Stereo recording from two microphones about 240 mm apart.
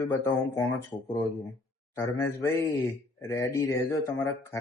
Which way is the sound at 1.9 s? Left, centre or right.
Centre.